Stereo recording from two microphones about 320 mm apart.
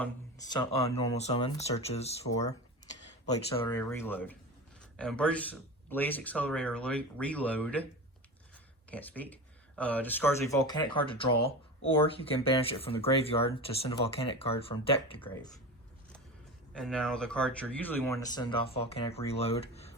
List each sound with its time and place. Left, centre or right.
0.0 s speech: centre
2.8 s a sound: right
3.6 s speech: centre
8.9 s speech: centre
16.7 s speech: centre